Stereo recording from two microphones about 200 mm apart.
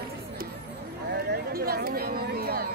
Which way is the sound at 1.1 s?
50° right (ahead or behind).